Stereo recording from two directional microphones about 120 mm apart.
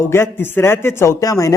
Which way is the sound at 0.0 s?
20° left (ahead or behind).